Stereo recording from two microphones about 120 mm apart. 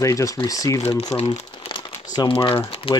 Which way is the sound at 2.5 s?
50° left (ahead or behind).